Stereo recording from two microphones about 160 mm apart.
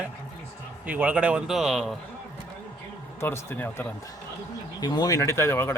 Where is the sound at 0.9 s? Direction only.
10° right (ahead or behind).